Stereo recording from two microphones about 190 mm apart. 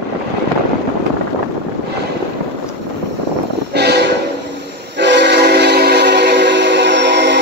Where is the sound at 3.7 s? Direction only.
60° right (ahead or behind).